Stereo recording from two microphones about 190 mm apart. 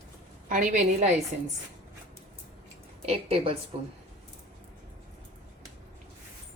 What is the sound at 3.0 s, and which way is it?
Speech, 30° right (ahead or behind).